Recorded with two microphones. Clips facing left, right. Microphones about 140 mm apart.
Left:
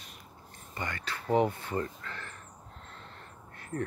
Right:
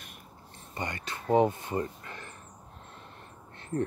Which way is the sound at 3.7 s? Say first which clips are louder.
Right 4 dB; 20° right (ahead or behind).